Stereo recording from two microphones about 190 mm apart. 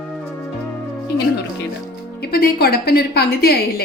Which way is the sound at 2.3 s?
50° left (ahead or behind).